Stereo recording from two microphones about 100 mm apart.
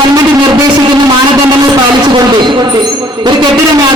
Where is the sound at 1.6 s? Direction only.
45° right (ahead or behind).